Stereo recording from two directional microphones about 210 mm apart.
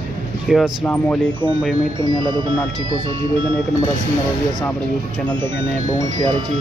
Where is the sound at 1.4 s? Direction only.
15° left (ahead or behind).